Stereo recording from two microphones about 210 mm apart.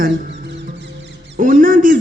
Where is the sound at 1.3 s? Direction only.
40° right (ahead or behind).